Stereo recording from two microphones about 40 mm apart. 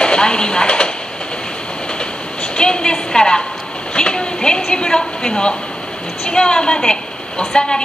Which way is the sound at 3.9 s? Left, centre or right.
Left.